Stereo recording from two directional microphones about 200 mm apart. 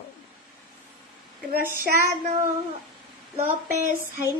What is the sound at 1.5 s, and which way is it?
Child singing, 45° right (ahead or behind).